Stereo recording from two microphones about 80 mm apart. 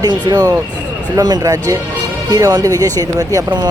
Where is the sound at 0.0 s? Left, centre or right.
Right.